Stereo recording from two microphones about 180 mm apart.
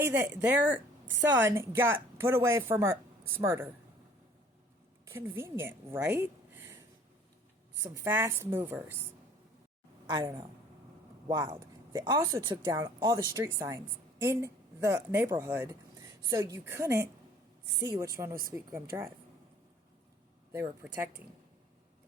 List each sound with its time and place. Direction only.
0.0 s a woman's voice: 15° right (ahead or behind)
5.0 s a woman's voice: 10° right (ahead or behind)
7.8 s a woman's voice: 15° right (ahead or behind)
10.1 s a woman's voice: 25° right (ahead or behind)
20.5 s a woman's voice: 15° right (ahead or behind)